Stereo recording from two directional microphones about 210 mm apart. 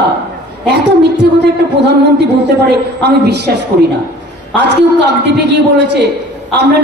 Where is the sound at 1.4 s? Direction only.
55° right (ahead or behind).